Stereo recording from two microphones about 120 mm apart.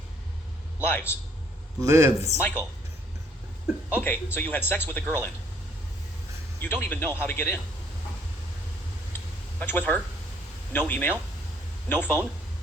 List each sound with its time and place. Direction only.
0.9 s a man's voice: 20° left (ahead or behind)
1.8 s a man's voice: 25° right (ahead or behind)
3.9 s speech: 15° left (ahead or behind)
6.6 s speech: 15° left (ahead or behind)
9.6 s speech: 15° left (ahead or behind)